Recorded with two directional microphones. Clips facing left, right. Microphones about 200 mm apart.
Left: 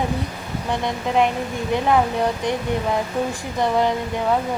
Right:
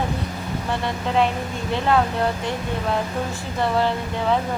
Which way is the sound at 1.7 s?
15° left (ahead or behind).